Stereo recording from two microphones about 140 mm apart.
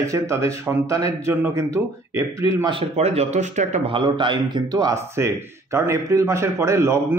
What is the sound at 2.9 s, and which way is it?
Speech, 50° right (ahead or behind).